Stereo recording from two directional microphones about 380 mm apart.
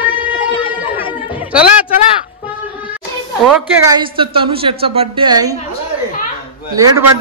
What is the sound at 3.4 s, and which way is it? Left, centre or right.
A woman's voice, centre.